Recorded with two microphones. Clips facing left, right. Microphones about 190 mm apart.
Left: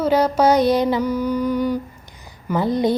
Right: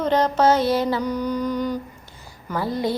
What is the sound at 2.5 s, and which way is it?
Speech, 20° left (ahead or behind).